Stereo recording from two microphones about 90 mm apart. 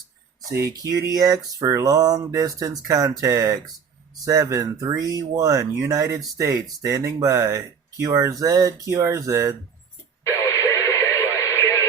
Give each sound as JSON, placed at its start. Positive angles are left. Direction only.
{"t": 0.8, "sound": "speech", "side_deg": -40}
{"t": 10.2, "sound": "radio", "side_deg": 35}